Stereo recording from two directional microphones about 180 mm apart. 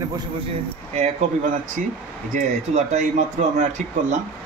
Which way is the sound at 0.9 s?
40° right (ahead or behind).